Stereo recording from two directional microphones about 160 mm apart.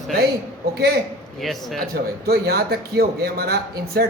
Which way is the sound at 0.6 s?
75° right (ahead or behind).